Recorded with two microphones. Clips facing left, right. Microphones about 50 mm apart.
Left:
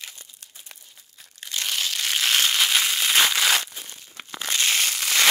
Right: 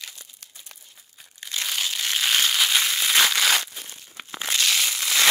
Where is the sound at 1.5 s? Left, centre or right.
Centre.